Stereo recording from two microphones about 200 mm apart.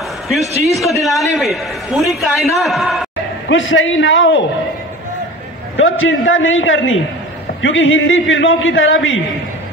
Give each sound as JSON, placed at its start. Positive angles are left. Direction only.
{"t": 0.7, "sound": "a man's voice", "side_deg": 0}
{"t": 3.4, "sound": "a man's voice", "side_deg": 70}
{"t": 5.8, "sound": "a man's voice", "side_deg": 75}